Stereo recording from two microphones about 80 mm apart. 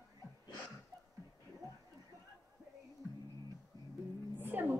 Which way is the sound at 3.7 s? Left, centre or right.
Right.